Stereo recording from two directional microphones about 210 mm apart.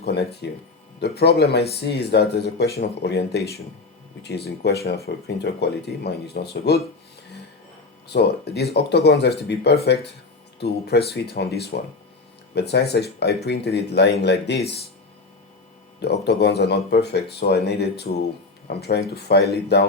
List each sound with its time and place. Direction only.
0.0 s speech: 50° left (ahead or behind)
8.0 s speech: 50° left (ahead or behind)
16.0 s speech: 55° left (ahead or behind)